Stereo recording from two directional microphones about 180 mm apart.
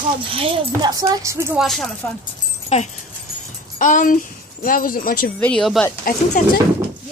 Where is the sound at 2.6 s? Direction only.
40° left (ahead or behind).